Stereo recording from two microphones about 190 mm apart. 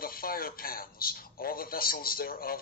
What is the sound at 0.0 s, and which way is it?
A man's voice, 50° left (ahead or behind).